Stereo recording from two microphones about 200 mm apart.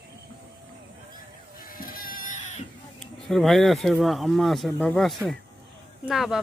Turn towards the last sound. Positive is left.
turn(degrees=0)  # may be behind; listen again after turning